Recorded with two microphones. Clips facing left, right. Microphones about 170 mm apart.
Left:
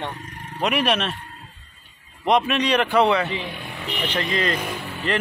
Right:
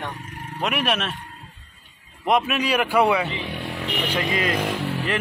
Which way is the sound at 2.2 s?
5° right (ahead or behind).